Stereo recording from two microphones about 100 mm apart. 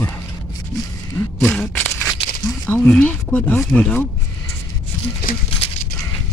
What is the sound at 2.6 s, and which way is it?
Speech, 15° left (ahead or behind).